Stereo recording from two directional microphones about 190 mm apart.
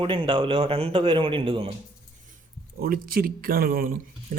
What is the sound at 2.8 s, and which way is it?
Speech, 50° right (ahead or behind).